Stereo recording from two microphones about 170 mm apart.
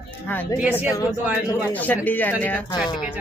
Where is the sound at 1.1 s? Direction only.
10° right (ahead or behind).